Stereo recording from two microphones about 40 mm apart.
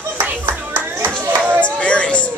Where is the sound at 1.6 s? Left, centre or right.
Left.